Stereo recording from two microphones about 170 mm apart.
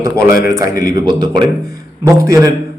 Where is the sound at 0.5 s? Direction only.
20° right (ahead or behind).